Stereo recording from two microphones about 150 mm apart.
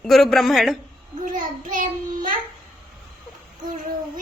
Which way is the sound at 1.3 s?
60° right (ahead or behind).